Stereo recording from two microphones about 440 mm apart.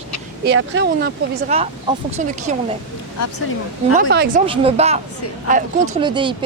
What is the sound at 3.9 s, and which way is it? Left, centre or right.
A woman's voice, centre.